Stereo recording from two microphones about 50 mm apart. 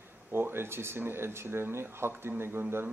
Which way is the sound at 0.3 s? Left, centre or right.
Right.